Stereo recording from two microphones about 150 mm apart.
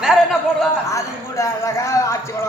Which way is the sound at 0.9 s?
20° left (ahead or behind).